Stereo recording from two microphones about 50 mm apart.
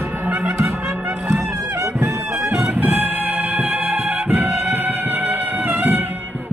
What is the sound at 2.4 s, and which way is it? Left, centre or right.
Music, right.